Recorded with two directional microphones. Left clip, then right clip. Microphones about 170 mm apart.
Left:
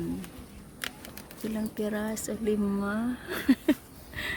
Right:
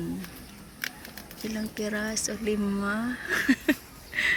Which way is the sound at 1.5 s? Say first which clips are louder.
Right 1 dB; 20° left (ahead or behind).